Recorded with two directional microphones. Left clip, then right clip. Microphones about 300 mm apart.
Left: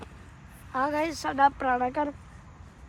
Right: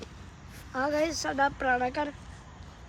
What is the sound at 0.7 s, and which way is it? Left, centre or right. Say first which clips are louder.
Speech: left 1 dB; left.